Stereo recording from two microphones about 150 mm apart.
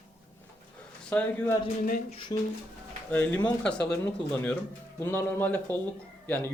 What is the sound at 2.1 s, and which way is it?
Speech, 35° left (ahead or behind).